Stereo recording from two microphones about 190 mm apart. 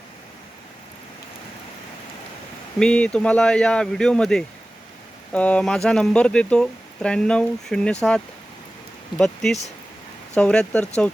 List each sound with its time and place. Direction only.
2.7 s speech: 5° left (ahead or behind)
9.1 s speech: 5° left (ahead or behind)